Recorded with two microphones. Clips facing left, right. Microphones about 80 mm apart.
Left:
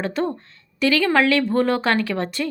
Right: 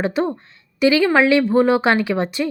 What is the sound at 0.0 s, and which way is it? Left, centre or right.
A woman's voice, centre.